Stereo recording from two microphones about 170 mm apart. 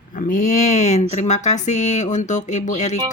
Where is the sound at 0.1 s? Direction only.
50° left (ahead or behind).